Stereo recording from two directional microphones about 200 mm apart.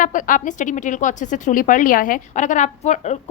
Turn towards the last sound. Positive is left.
turn(degrees=35)  # may be behind; listen again after turning